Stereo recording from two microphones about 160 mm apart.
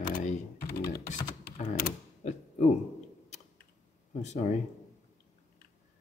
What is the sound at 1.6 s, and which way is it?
Mechanisms, 50° left (ahead or behind).